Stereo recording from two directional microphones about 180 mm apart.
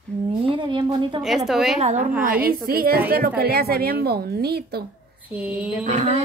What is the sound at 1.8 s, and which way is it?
Speech, 40° right (ahead or behind).